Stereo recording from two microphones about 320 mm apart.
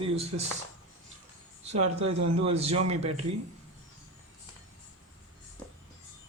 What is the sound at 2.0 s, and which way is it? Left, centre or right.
Speech, right.